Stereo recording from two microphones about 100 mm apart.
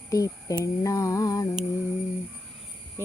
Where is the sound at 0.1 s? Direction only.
35° left (ahead or behind).